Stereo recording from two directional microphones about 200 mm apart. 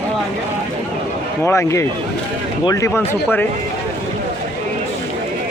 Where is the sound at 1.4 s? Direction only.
15° left (ahead or behind).